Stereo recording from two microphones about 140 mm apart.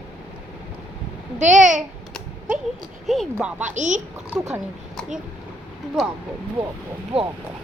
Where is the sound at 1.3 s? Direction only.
60° right (ahead or behind).